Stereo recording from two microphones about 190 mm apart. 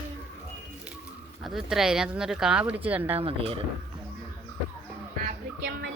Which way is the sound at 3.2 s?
30° right (ahead or behind).